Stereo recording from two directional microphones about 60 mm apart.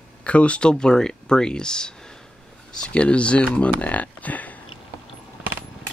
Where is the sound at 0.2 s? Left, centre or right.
Left.